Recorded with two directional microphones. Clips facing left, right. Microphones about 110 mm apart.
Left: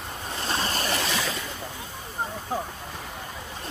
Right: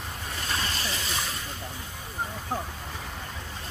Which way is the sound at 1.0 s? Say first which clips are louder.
Left 5 dB; 90° left.